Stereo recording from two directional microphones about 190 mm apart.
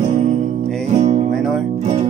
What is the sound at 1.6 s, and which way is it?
Music, 35° right (ahead or behind).